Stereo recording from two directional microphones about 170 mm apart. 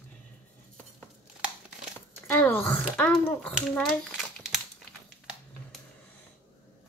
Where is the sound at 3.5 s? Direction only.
Centre (ahead or behind).